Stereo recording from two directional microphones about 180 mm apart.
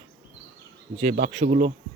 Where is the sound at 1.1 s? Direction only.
45° right (ahead or behind).